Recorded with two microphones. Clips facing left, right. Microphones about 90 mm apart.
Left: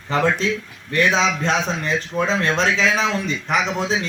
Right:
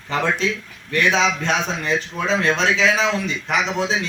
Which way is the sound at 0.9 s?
35° left (ahead or behind).